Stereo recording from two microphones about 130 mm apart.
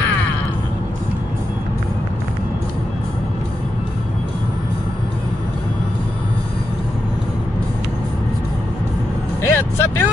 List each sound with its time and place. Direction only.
9.4 s vehicle: 15° left (ahead or behind)